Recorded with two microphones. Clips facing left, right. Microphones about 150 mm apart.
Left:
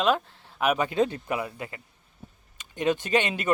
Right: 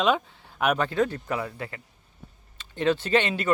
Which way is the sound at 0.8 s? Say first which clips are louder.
Even; 20° left (ahead or behind).